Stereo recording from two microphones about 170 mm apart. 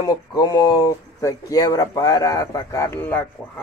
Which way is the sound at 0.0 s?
25° left (ahead or behind).